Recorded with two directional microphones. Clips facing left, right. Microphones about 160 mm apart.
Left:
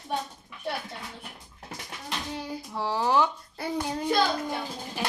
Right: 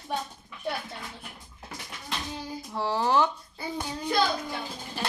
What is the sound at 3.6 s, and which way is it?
Child singing, 70° left (ahead or behind).